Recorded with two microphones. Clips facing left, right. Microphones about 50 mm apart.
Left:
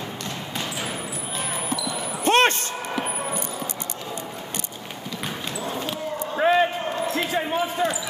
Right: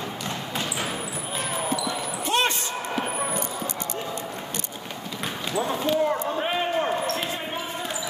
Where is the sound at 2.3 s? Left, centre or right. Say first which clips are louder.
Left 6 dB; left.